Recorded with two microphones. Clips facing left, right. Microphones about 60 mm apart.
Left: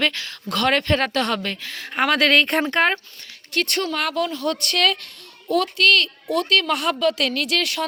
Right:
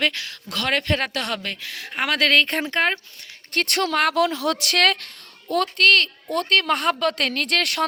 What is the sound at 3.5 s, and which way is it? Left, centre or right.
A woman's voice, right.